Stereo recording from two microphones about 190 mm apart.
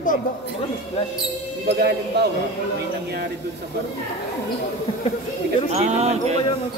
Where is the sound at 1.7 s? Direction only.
60° right (ahead or behind).